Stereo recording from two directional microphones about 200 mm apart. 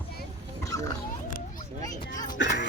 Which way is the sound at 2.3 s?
60° left (ahead or behind).